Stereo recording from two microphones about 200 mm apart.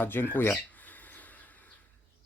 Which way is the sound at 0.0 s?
10° left (ahead or behind).